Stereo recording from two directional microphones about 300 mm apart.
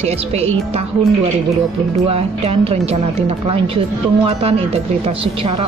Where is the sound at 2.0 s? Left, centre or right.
Centre.